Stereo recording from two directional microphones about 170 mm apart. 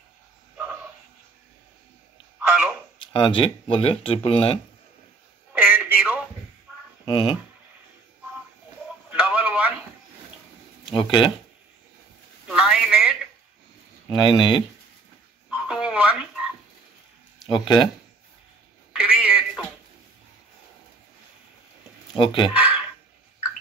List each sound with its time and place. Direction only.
3.1 s speech: 30° left (ahead or behind)
5.5 s telephone: 10° right (ahead or behind)
7.1 s speech: 30° left (ahead or behind)
9.1 s radio: 5° right (ahead or behind)
10.9 s speech: 30° left (ahead or behind)
12.4 s a sound: 5° right (ahead or behind)
14.2 s speech: 30° left (ahead or behind)
15.5 s telephone: 5° right (ahead or behind)
17.5 s speech: 30° left (ahead or behind)
18.9 s telephone: 5° right (ahead or behind)
22.1 s speech: 30° left (ahead or behind)
22.5 s a sound: 10° right (ahead or behind)